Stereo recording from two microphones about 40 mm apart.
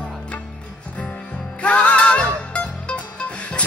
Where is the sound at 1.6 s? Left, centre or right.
Left.